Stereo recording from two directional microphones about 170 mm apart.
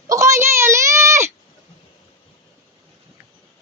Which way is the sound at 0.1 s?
15° right (ahead or behind).